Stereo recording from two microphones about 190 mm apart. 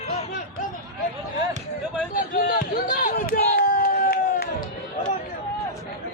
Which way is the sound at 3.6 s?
50° left (ahead or behind).